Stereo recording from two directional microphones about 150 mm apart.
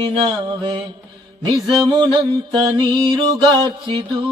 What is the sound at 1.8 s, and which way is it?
Mantra, 30° right (ahead or behind).